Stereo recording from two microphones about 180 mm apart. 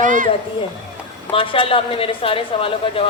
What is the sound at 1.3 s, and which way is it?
A woman's voice, 30° left (ahead or behind).